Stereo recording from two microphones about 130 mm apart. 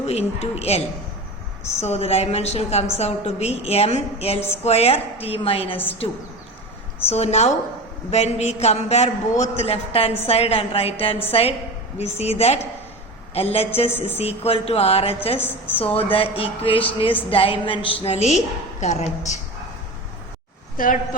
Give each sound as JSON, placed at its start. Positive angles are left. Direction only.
{"t": 0.0, "sound": "a woman's voice", "side_deg": 50}
{"t": 1.8, "sound": "a woman's voice", "side_deg": 55}
{"t": 5.7, "sound": "a woman's voice", "side_deg": 15}
{"t": 7.1, "sound": "a man's voice", "side_deg": 55}
{"t": 15.4, "sound": "a woman's voice", "side_deg": 15}
{"t": 15.8, "sound": "a woman's voice", "side_deg": 45}
{"t": 20.7, "sound": "a woman's voice", "side_deg": 90}